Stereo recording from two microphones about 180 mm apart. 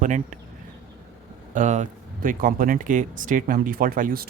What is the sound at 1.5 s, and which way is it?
Speech, 40° right (ahead or behind).